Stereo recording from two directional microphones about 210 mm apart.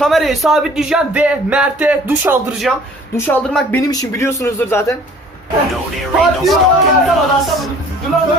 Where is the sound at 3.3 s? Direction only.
10° left (ahead or behind).